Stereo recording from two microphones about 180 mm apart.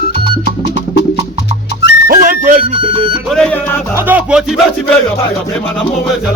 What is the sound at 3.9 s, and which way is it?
Music, 10° right (ahead or behind).